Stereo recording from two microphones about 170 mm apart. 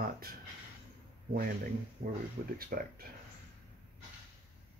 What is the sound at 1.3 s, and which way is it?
Speech, 60° right (ahead or behind).